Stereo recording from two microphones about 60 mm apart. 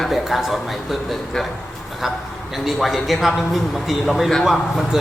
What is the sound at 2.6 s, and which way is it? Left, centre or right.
A woman's voice, centre.